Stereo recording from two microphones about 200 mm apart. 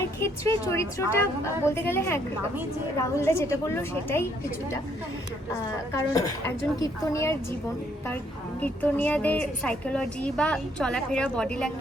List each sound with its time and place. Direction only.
0.2 s a woman's voice: 15° left (ahead or behind)
6.1 s a woman's voice: 15° left (ahead or behind)
8.6 s a woman's voice: 10° left (ahead or behind)